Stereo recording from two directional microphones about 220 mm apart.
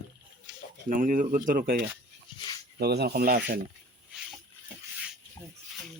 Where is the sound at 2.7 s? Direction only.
50° right (ahead or behind).